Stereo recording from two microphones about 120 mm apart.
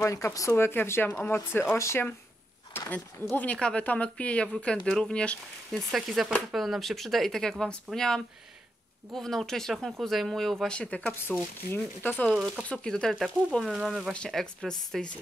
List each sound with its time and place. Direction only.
0.0 s speech: 25° left (ahead or behind)
2.8 s a sound: 15° left (ahead or behind)
3.3 s speech: 10° left (ahead or behind)
14.1 s speech: 5° left (ahead or behind)